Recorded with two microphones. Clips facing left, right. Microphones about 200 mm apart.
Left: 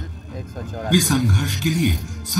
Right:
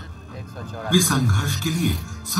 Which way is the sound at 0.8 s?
20° left (ahead or behind).